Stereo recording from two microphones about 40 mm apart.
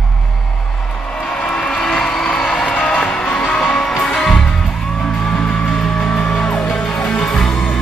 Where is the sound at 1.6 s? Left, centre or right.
Left.